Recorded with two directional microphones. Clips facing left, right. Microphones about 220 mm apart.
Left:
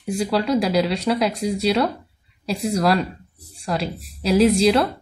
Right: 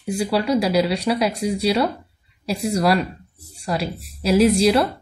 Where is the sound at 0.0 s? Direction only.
5° right (ahead or behind).